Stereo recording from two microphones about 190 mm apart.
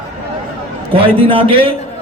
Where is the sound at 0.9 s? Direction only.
30° right (ahead or behind).